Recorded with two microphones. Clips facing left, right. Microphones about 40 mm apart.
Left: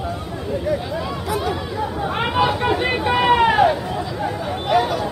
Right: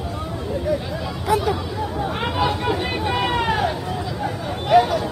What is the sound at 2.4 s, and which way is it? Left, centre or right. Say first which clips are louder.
Speech: left 4 dB; centre.